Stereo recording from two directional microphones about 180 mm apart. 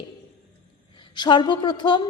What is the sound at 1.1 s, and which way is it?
Speech, 25° left (ahead or behind).